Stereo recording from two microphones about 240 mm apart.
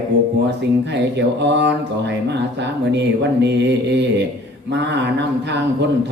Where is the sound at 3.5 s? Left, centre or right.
Right.